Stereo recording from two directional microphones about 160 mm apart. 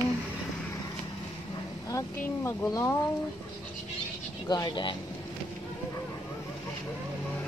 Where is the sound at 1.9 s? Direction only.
20° left (ahead or behind).